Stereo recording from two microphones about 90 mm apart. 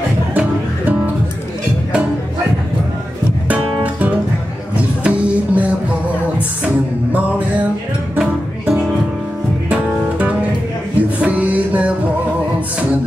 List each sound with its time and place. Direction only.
0.3 s music: 15° right (ahead or behind)
3.4 s music: 15° right (ahead or behind)
7.1 s music: 15° right (ahead or behind)